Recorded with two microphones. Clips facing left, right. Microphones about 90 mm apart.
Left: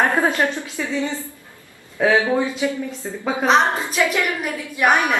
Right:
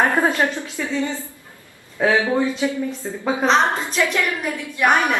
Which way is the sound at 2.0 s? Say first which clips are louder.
Left 1 dB; 5° right (ahead or behind).